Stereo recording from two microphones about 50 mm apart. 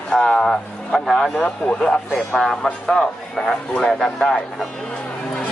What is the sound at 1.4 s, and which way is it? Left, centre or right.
Speech, left.